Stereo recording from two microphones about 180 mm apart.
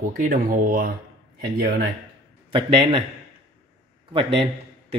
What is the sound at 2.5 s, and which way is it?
Speech, 25° right (ahead or behind).